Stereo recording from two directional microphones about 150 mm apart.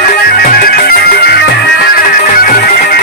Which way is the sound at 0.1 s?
75° left (ahead or behind).